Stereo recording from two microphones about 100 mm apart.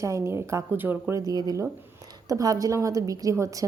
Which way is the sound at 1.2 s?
40° right (ahead or behind).